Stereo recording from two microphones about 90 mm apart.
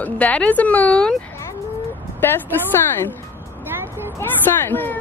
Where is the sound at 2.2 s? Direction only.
20° left (ahead or behind).